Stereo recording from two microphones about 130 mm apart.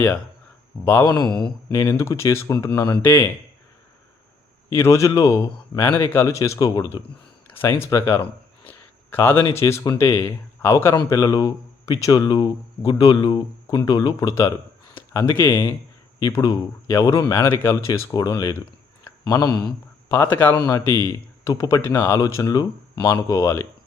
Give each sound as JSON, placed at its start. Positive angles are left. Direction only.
{"t": 1.1, "sound": "speech", "side_deg": 5}
{"t": 1.7, "sound": "speech", "side_deg": 25}
{"t": 4.7, "sound": "speech", "side_deg": 20}
{"t": 7.5, "sound": "speech", "side_deg": 20}
{"t": 8.6, "sound": "a sound", "side_deg": 15}
{"t": 9.5, "sound": "speech", "side_deg": 20}
{"t": 16.2, "sound": "speech", "side_deg": 30}
{"t": 19.5, "sound": "speech", "side_deg": 10}